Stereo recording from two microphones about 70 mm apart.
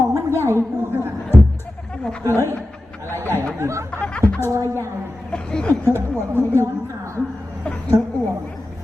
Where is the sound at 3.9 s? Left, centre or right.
Left.